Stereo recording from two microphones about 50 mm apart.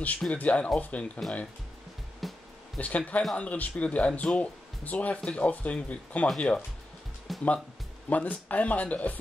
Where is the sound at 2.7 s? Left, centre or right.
Left.